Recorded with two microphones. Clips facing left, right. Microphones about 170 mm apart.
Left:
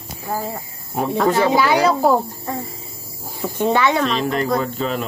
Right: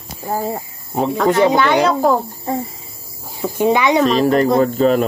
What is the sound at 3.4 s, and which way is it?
Speech, 10° right (ahead or behind).